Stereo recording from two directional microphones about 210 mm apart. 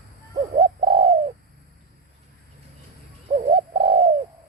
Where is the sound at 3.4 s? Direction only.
25° right (ahead or behind).